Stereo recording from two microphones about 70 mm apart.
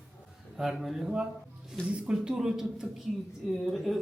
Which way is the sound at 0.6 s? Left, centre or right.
Centre.